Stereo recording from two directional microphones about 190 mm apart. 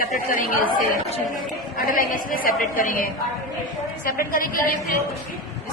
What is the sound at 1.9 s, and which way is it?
A woman's voice, 50° left (ahead or behind).